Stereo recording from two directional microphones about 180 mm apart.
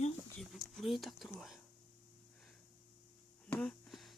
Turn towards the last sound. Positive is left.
turn(degrees=0)  # may be behind; listen again after turning